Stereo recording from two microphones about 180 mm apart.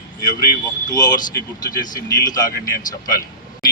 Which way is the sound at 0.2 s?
20° left (ahead or behind).